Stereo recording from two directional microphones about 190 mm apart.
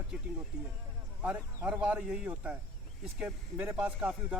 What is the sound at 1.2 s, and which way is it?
Speech, 10° right (ahead or behind).